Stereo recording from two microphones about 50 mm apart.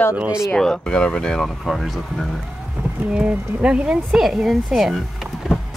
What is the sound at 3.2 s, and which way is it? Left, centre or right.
Speech, centre.